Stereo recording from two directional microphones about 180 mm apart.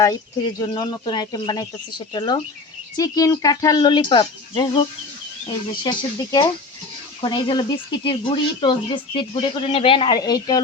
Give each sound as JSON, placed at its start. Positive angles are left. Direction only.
{"t": 0.6, "sound": "speech", "side_deg": 25}